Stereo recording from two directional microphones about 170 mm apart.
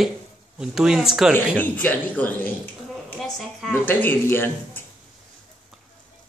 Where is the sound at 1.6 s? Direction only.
10° left (ahead or behind).